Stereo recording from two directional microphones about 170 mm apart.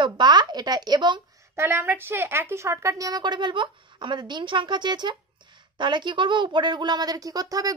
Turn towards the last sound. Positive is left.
turn(degrees=-20)  # may be behind; listen again after turning